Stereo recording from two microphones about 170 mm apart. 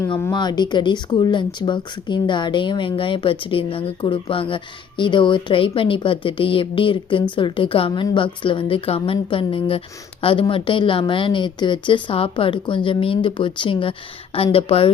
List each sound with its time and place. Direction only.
0.0 s speech: 15° left (ahead or behind); by 14.8 s 35° left (ahead or behind)